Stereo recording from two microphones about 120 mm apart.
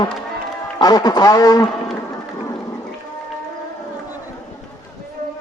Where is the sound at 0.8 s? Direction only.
35° left (ahead or behind).